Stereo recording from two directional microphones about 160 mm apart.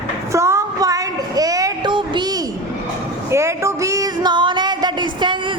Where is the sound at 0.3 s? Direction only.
20° right (ahead or behind).